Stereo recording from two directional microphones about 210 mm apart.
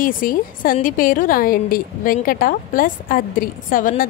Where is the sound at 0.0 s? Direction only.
40° left (ahead or behind).